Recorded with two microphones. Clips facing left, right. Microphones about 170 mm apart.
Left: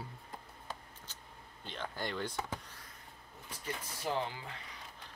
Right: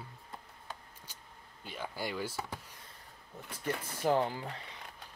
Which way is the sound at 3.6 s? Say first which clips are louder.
Right 7 dB; 50° right (ahead or behind).